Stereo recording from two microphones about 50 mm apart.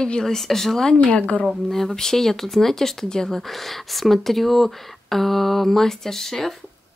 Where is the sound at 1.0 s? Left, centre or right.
Left.